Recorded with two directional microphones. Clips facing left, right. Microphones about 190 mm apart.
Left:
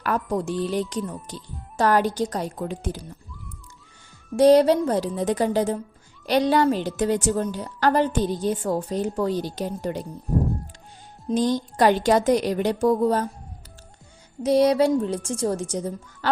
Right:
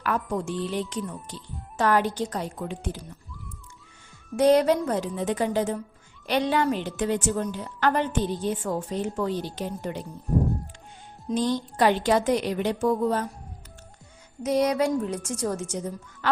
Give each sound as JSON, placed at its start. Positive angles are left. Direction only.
{"t": 0.0, "sound": "a woman's voice", "side_deg": 35}
{"t": 4.4, "sound": "a woman's voice", "side_deg": 30}
{"t": 11.3, "sound": "a woman's voice", "side_deg": 45}
{"t": 14.4, "sound": "a woman's voice", "side_deg": 30}